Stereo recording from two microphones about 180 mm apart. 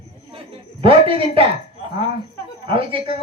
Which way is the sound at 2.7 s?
30° right (ahead or behind).